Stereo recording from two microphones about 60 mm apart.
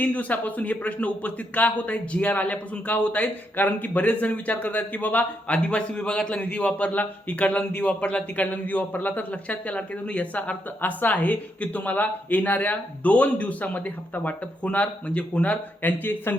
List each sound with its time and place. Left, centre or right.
0.0 s a man's voice: left